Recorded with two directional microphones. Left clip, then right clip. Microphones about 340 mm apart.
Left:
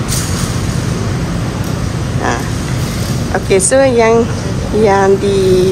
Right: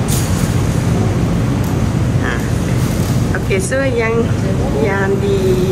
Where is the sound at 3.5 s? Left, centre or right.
Centre.